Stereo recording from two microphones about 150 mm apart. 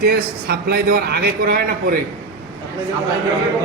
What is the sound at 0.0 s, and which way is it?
A man's voice, 90° right.